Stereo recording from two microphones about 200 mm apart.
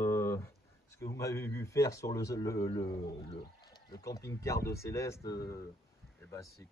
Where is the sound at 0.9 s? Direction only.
15° left (ahead or behind).